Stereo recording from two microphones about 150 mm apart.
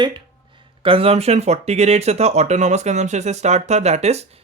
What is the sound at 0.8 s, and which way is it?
Speech, 35° right (ahead or behind).